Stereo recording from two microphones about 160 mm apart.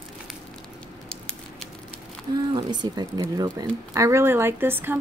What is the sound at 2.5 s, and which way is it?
A woman's voice, 25° right (ahead or behind).